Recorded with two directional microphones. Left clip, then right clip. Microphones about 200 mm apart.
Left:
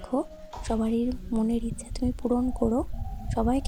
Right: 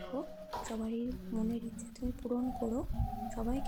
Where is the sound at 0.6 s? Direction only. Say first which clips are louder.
Left 13 dB; 40° left (ahead or behind).